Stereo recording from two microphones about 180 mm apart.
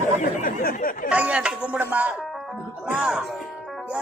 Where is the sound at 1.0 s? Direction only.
5° right (ahead or behind).